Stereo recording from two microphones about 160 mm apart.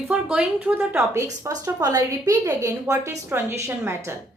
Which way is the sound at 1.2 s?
20° right (ahead or behind).